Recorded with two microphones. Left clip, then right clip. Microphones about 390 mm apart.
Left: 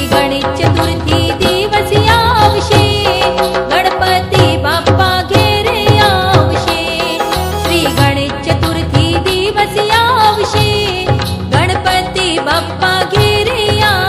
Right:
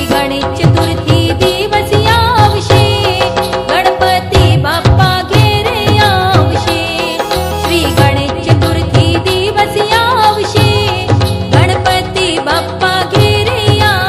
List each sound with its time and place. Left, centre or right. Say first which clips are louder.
2.0 s music: left 1 dB; centre
5.0 s music: even; centre
9.8 s music: left 1 dB; centre
12.2 s music: right 1 dB; centre